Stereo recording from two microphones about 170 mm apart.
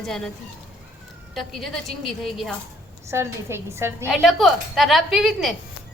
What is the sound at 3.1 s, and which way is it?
Speech, 15° right (ahead or behind).